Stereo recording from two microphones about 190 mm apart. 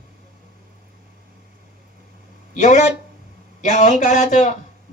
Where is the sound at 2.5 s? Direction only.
40° left (ahead or behind).